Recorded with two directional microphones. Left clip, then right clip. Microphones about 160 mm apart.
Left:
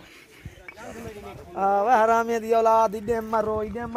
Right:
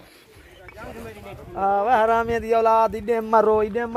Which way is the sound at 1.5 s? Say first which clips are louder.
Right 1 dB; 40° left (ahead or behind).